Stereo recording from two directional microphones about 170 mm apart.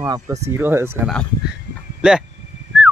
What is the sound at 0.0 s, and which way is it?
Speech, 20° right (ahead or behind).